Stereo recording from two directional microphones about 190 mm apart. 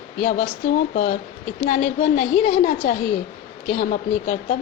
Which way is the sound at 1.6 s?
35° left (ahead or behind).